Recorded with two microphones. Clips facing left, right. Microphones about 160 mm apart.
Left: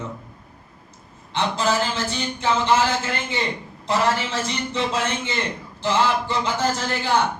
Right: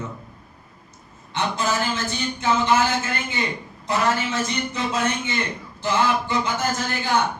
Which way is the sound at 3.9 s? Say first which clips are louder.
Left 1 dB; 30° left (ahead or behind).